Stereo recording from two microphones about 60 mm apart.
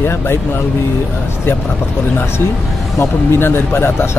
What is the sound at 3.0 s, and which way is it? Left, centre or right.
Speech, left.